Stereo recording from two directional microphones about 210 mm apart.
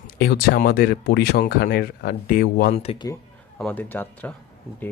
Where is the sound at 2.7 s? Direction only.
30° left (ahead or behind).